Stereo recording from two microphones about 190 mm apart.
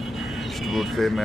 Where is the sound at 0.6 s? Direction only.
Centre (ahead or behind).